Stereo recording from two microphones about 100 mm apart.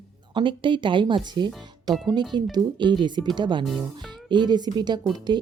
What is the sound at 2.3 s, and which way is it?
Speech, 45° right (ahead or behind).